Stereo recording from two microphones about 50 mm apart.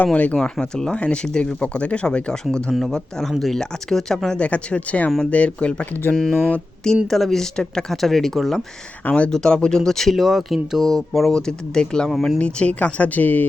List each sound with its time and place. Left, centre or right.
0.0 s speech: left
0.6 s speech: centre
4.4 s speech: left
5.8 s speech: left
6.8 s speech: centre
9.0 s speech: left
9.3 s speech: centre; by 13.4 s left